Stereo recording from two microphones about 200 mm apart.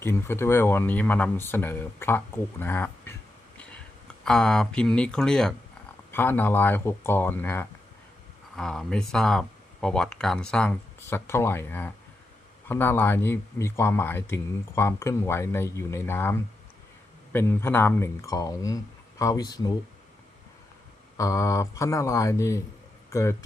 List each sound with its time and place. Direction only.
0.0 s speech: 15° left (ahead or behind)
4.2 s speech: 5° left (ahead or behind); by 19.7 s 20° left (ahead or behind)
21.2 s speech: 15° left (ahead or behind)